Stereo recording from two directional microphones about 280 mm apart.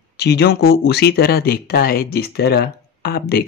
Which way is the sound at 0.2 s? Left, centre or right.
Left.